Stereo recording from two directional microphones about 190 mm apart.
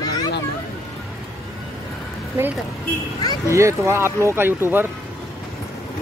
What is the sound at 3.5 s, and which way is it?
Speech, 15° right (ahead or behind).